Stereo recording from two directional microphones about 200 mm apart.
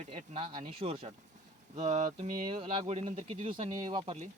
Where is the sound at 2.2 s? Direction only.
30° right (ahead or behind).